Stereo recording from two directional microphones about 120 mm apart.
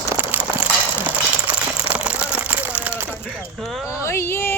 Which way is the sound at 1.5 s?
10° right (ahead or behind).